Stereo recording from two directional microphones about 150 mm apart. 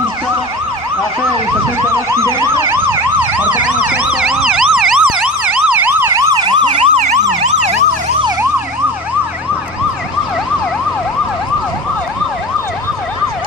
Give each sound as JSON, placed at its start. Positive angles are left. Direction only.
{"t": 2.0, "sound": "emergency vehicle", "side_deg": -20}
{"t": 7.0, "sound": "emergency vehicle", "side_deg": -50}